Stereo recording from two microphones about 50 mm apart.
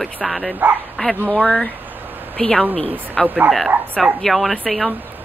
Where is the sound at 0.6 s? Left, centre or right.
Right.